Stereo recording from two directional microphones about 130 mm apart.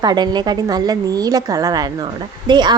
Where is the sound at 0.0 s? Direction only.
35° right (ahead or behind).